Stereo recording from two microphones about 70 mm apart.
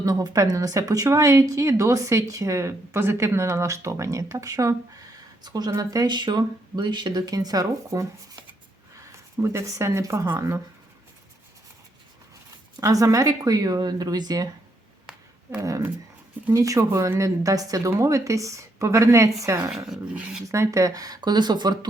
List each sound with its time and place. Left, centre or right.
0.0 s speech: right
5.4 s speech: right
9.1 s speech: right
10.2 s speech: right
12.8 s speech: right
15.5 s speech: right
20.1 s speech: centre
20.5 s speech: right